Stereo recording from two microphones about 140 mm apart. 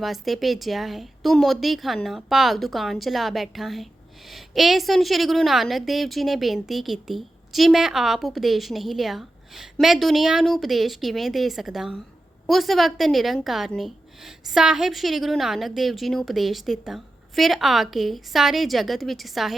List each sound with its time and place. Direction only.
0.0 s a woman's voice: centre (ahead or behind)